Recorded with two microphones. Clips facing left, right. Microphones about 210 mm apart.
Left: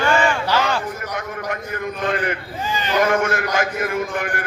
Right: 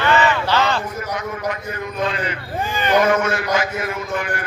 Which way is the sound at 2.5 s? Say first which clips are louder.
Right 4 dB; 55° right (ahead or behind).